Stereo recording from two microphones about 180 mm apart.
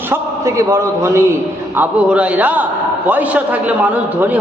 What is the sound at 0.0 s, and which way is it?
A man's voice, 15° right (ahead or behind).